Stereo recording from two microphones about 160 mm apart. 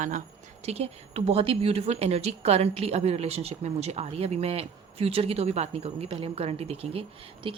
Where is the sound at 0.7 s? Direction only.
40° right (ahead or behind).